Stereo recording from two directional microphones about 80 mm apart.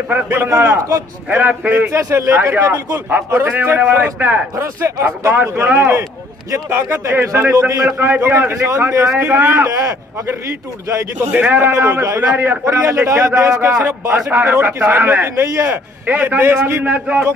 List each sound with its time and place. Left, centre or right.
0.1 s speech: right
0.6 s a man's voice: right
1.3 s speech: centre
1.9 s a man's voice: right
3.1 s speech: centre
4.6 s a man's voice: right
5.3 s a man's voice: right
9.2 s speech: right
9.7 s a man's voice: right
11.3 s speech: right
12.3 s speech: right
12.6 s a man's voice: right
14.3 s speech: right
15.7 s a man's voice: right